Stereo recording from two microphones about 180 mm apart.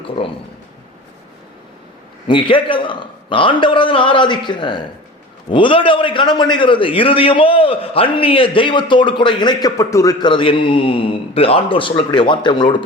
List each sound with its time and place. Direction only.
2.2 s a man's voice: 30° left (ahead or behind)